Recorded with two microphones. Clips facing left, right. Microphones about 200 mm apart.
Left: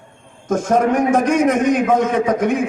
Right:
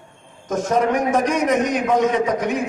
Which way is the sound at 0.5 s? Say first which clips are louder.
Left 3 dB; 50° left (ahead or behind).